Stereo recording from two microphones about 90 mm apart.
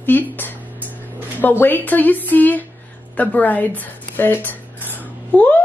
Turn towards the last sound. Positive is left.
turn(degrees=15)  # may be behind; listen again after turning